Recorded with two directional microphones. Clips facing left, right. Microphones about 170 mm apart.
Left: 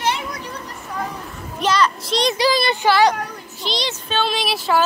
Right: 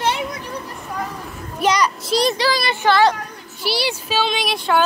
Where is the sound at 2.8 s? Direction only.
15° left (ahead or behind).